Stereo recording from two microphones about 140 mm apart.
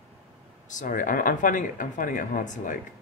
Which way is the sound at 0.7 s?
70° left (ahead or behind).